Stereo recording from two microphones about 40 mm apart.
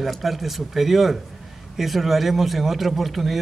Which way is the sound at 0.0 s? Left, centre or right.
Centre.